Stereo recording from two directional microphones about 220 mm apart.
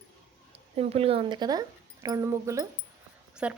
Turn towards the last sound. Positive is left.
turn(degrees=-5)  # may be behind; listen again after turning